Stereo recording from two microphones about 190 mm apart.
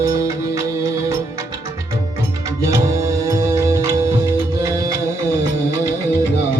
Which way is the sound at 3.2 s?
15° right (ahead or behind).